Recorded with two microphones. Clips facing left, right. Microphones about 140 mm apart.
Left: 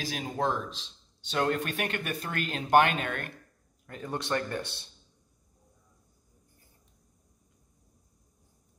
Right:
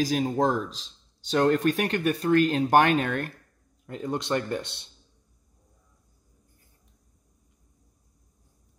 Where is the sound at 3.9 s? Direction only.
20° right (ahead or behind).